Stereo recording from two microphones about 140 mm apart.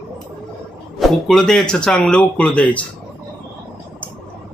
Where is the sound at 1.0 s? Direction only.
Centre (ahead or behind).